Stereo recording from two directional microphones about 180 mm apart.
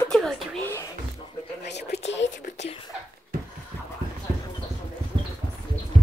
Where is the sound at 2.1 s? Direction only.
85° left.